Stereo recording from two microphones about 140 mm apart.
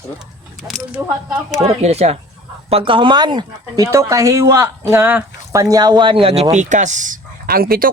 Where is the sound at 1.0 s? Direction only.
25° right (ahead or behind).